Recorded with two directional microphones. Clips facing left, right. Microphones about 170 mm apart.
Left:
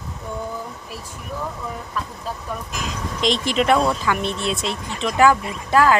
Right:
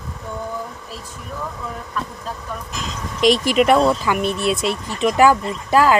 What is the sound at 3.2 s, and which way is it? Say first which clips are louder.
Speech: right 6 dB; 20° left (ahead or behind).